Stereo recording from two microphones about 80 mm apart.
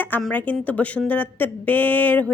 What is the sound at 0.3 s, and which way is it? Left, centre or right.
Speech, centre.